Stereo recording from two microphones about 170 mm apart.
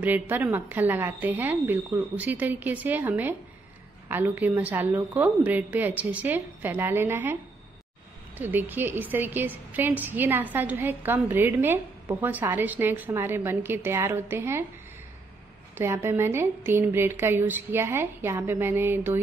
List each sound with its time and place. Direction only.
0.0 s a woman's voice: 10° right (ahead or behind)
8.4 s a woman's voice: 10° right (ahead or behind)
15.7 s a woman's voice: 15° right (ahead or behind)